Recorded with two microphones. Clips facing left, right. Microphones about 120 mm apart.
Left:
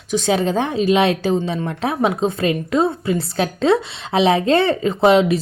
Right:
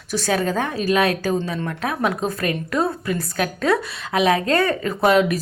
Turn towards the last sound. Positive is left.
turn(degrees=25)  # may be behind; listen again after turning